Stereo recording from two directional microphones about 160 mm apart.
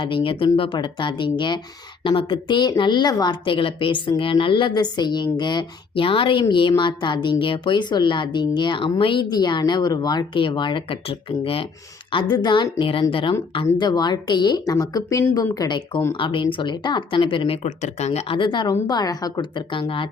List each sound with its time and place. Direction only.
0.0 s speech: 30° left (ahead or behind)